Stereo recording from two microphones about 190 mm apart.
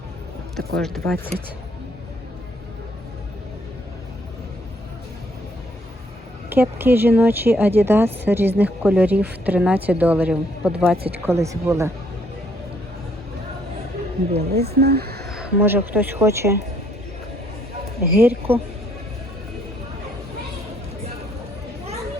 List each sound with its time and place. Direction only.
0.5 s speech: centre (ahead or behind)
6.5 s speech: 10° right (ahead or behind)
11.3 s speech: 15° right (ahead or behind)
14.3 s speech: 35° right (ahead or behind)
14.7 s speech: 55° right (ahead or behind)
15.3 s speech: 5° right (ahead or behind)
18.0 s speech: 10° right (ahead or behind)